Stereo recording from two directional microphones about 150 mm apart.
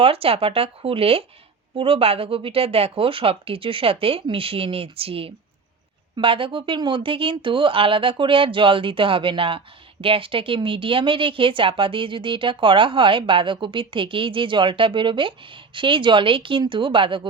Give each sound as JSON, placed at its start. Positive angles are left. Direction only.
{"t": 0.0, "sound": "speech", "side_deg": -40}